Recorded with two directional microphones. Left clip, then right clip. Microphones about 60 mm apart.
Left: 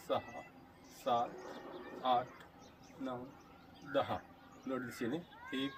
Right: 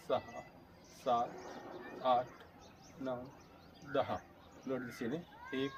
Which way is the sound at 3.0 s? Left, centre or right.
Centre.